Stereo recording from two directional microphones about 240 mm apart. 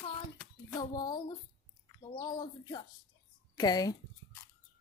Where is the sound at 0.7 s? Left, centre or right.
Centre.